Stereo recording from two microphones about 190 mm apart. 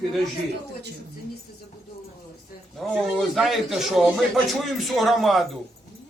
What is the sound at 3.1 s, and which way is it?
Speech, centre (ahead or behind).